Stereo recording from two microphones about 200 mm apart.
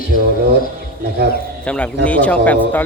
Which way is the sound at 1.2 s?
55° right (ahead or behind).